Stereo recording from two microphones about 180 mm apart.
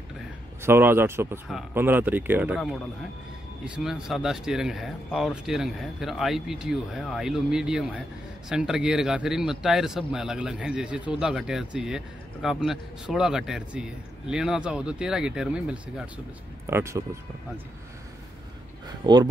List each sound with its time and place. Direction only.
0.6 s speech: 15° right (ahead or behind)
19.1 s speech: 25° right (ahead or behind)